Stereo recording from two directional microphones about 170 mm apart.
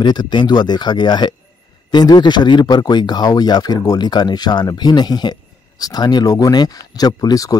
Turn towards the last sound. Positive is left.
turn(degrees=20)  # may be behind; listen again after turning